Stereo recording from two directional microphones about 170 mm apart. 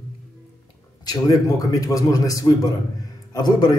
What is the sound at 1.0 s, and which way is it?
A man's voice, 20° left (ahead or behind).